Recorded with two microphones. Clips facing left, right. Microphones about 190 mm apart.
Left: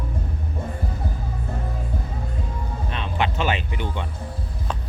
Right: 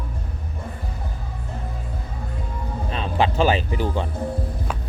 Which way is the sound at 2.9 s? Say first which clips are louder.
Right 4 dB; 35° right (ahead or behind).